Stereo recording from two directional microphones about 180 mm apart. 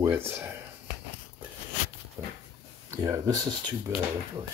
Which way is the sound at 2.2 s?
10° right (ahead or behind).